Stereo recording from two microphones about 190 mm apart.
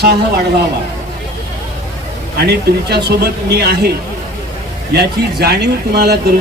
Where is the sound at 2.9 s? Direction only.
60° right (ahead or behind).